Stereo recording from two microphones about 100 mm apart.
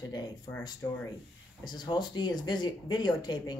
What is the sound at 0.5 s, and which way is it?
Speech, 55° left (ahead or behind).